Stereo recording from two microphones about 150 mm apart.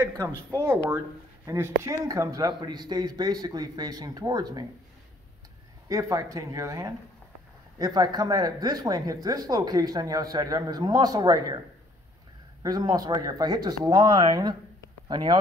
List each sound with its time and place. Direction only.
0.6 s speech: 15° right (ahead or behind)
5.9 s speech: 20° right (ahead or behind)
12.6 s speech: 25° right (ahead or behind)